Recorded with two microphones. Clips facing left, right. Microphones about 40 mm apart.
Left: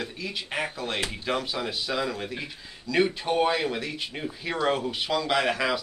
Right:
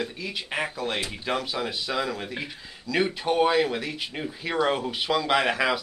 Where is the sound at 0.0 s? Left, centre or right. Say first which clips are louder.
Right 2 dB; centre.